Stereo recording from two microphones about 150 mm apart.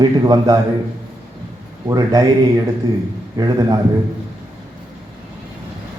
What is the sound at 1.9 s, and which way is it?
A man's voice, 25° right (ahead or behind).